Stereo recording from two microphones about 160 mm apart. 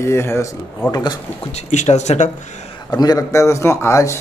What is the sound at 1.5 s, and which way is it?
Speech, 45° left (ahead or behind).